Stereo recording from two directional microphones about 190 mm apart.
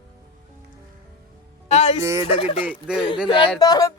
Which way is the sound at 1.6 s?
35° left (ahead or behind).